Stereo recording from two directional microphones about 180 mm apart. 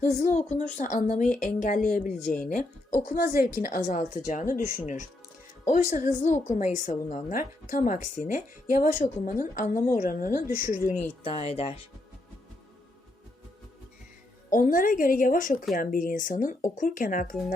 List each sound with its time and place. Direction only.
0.0 s a woman's voice: 40° left (ahead or behind)
2.2 s speech: 5° left (ahead or behind)
2.5 s a woman's voice: 50° left (ahead or behind)
11.2 s speech: 35° left (ahead or behind)
14.5 s a woman's voice: 50° left (ahead or behind)